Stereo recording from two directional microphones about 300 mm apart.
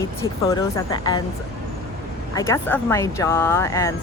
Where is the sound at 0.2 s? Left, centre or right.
Centre.